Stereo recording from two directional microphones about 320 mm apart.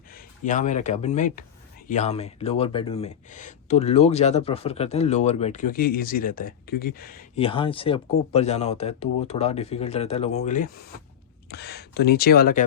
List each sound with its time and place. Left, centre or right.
0.1 s speech: left